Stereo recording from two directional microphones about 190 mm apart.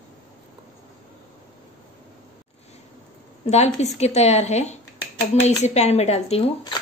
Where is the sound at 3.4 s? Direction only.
35° left (ahead or behind).